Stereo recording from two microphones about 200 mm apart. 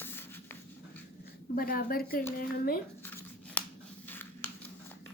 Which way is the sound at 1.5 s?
45° left (ahead or behind).